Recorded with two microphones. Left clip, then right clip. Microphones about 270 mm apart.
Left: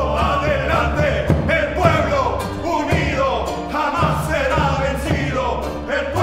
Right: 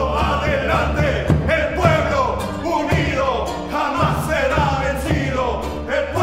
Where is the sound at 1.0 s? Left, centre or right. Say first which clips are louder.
Left 1 dB; right.